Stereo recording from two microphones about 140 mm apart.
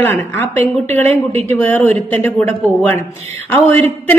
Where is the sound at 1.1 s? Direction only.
50° right (ahead or behind).